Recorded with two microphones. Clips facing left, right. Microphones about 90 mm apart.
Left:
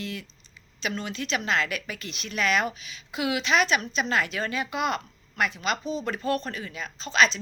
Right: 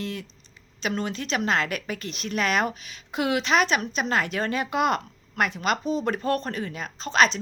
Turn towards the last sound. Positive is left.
turn(degrees=-50)  # may be behind; listen again after turning